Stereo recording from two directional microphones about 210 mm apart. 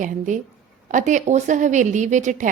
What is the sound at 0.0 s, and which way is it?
A woman's voice, 40° right (ahead or behind).